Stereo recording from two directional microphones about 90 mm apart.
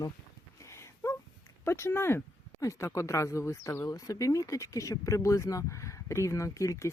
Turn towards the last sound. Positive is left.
turn(degrees=35)  # may be behind; listen again after turning